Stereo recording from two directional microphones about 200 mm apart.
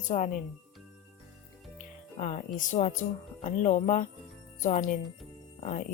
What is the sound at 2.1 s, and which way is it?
Jingle bell, 35° left (ahead or behind).